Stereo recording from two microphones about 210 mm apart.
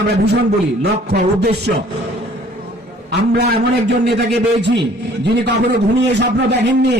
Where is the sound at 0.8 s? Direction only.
50° right (ahead or behind).